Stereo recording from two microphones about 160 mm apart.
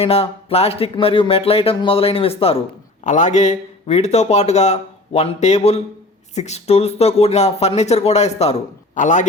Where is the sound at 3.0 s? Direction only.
50° left (ahead or behind).